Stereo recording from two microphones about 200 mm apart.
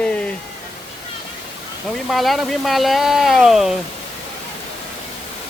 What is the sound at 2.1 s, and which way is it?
Speech, centre (ahead or behind).